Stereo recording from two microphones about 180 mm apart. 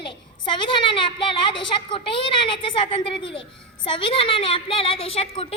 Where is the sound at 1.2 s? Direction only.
30° left (ahead or behind).